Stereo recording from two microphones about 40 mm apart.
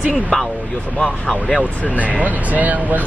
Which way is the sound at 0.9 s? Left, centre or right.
Left.